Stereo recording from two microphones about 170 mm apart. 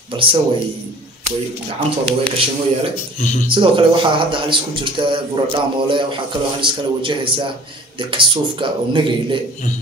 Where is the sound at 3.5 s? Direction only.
30° right (ahead or behind).